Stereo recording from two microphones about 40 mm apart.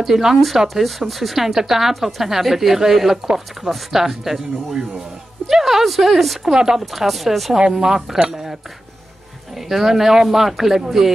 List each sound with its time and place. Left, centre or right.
0.0 s speech: centre
6.5 s speech: centre
6.8 s speech: centre
9.7 s speech: centre